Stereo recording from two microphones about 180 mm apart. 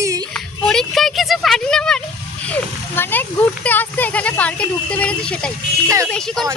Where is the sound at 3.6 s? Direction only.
10° left (ahead or behind).